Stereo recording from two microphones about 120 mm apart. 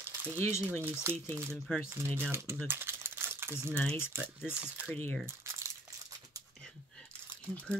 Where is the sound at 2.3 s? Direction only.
20° right (ahead or behind).